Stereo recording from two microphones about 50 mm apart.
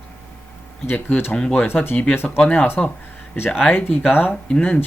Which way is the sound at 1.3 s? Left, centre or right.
Centre.